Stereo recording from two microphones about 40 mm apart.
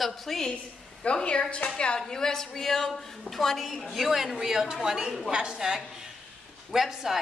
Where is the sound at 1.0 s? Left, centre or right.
Left.